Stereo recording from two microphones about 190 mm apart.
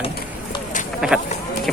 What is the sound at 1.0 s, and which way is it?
Speech, 5° right (ahead or behind).